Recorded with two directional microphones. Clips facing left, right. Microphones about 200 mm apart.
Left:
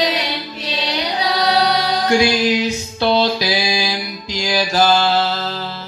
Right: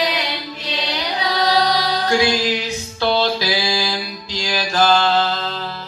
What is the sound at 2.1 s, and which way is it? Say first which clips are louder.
Music: left 3 dB; 15° left (ahead or behind).